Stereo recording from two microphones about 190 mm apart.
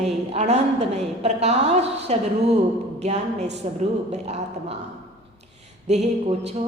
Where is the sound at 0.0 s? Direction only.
35° right (ahead or behind).